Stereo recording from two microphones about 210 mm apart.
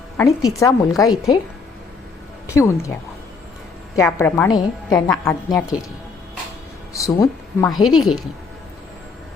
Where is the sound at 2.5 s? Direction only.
15° left (ahead or behind).